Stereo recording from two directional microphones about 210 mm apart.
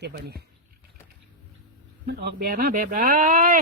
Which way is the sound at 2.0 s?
50° right (ahead or behind).